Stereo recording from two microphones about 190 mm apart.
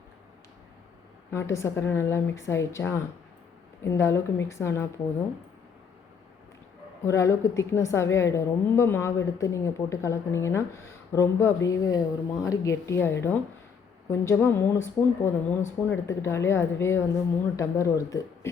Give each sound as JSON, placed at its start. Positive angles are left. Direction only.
{"t": 1.3, "sound": "a woman's voice", "side_deg": 15}
{"t": 7.0, "sound": "a woman's voice", "side_deg": 15}